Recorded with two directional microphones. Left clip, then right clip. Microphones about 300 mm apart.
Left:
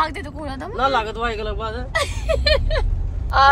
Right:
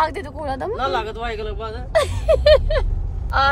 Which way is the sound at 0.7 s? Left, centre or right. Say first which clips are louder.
Left 6 dB; centre.